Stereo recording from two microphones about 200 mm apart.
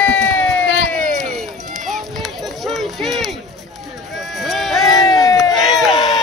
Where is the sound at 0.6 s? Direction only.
75° left (ahead or behind).